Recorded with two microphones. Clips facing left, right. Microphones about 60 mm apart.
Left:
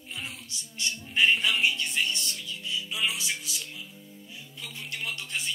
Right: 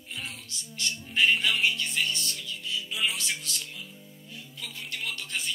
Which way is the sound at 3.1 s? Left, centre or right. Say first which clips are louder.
Even; centre.